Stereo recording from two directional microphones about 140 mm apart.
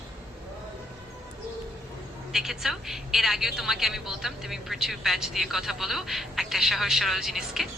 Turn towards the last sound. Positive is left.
turn(degrees=0)  # may be behind; listen again after turning